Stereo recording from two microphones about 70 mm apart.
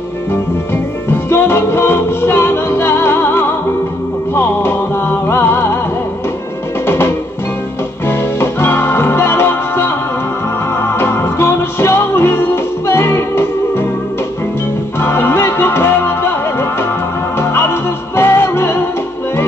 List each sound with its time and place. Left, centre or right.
1.1 s music: left
8.1 s music: left
15.0 s music: left